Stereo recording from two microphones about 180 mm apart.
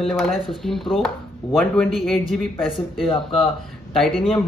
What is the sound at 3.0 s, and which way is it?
Speech, 30° left (ahead or behind).